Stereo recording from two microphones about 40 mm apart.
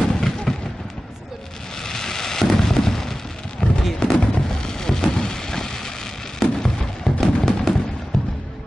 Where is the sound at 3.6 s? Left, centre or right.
Left.